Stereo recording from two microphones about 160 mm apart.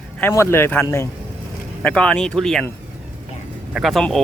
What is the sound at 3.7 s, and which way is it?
Speech, centre (ahead or behind).